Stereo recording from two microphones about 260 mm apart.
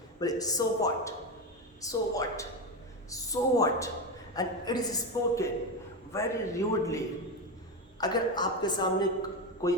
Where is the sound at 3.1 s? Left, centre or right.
Centre.